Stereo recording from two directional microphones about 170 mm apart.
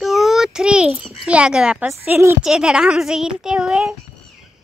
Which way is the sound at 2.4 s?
5° right (ahead or behind).